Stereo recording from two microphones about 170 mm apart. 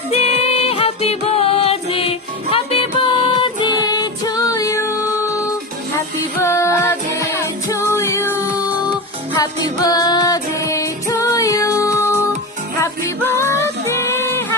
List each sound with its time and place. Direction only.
0.1 s music: 35° left (ahead or behind); by 14.4 s 15° left (ahead or behind)